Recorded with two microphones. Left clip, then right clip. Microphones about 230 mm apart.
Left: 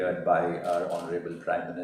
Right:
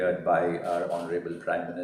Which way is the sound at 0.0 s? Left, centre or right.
Right.